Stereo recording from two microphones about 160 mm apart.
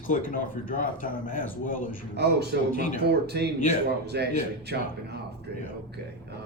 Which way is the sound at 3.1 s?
90° right.